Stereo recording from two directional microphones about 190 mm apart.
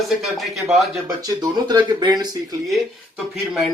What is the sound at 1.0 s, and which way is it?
Speech, 20° right (ahead or behind).